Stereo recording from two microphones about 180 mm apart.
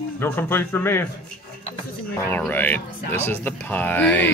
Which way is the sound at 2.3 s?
10° left (ahead or behind).